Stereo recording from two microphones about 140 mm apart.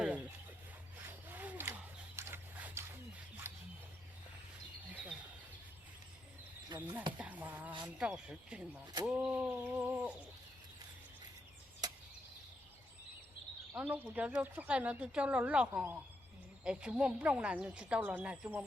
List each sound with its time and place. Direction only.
0.0 s a sound: 10° right (ahead or behind)
6.7 s speech: 10° right (ahead or behind)
13.7 s speech: 10° right (ahead or behind)